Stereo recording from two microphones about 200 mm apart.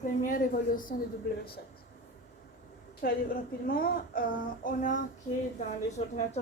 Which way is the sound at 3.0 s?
50° left (ahead or behind).